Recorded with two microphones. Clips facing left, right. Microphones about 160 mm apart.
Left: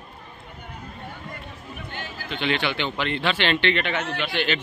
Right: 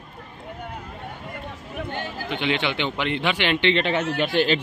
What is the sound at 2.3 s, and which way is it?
Speech, 20° right (ahead or behind).